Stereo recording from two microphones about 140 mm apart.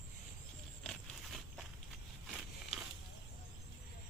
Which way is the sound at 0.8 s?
Centre (ahead or behind).